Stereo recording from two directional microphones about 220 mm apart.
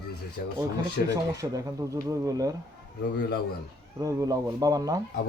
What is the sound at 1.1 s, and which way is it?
Speech, 15° right (ahead or behind).